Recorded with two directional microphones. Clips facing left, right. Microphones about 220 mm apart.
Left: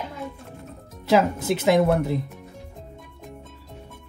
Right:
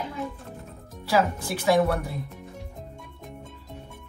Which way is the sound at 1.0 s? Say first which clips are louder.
Left 4 dB; 20° left (ahead or behind).